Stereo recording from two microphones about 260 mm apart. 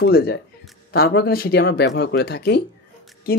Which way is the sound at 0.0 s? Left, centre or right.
Left.